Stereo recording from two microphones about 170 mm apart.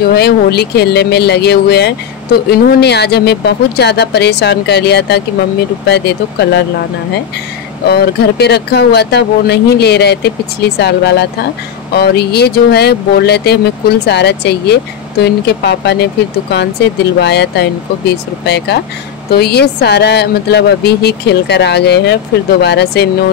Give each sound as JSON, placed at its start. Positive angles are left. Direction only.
{"t": 0.1, "sound": "speech", "side_deg": 70}
{"t": 7.9, "sound": "speech", "side_deg": 75}
{"t": 11.9, "sound": "speech", "side_deg": 70}